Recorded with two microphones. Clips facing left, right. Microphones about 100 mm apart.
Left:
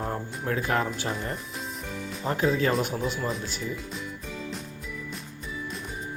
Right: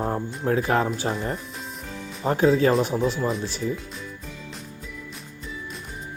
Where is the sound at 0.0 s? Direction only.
25° right (ahead or behind).